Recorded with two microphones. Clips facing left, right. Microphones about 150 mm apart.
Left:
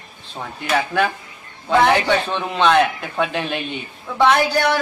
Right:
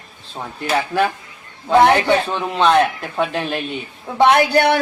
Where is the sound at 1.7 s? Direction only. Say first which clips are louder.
Right 3 dB; 20° right (ahead or behind).